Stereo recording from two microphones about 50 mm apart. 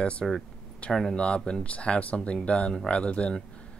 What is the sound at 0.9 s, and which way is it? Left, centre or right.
Speech, centre.